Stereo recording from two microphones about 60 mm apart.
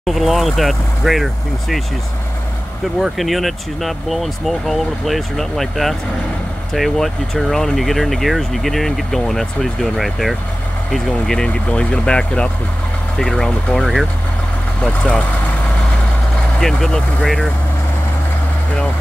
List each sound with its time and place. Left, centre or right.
0.0 s speech: centre
3.0 s speech: centre
13.7 s speech: centre
14.8 s speech: centre
16.5 s speech: centre